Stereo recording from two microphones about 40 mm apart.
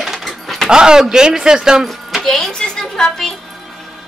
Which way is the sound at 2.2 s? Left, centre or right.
Centre.